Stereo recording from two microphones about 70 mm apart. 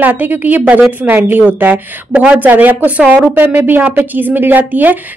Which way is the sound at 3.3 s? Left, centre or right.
Right.